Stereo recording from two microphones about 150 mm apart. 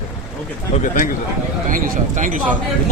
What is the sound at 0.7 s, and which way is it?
Speech, 60° left (ahead or behind).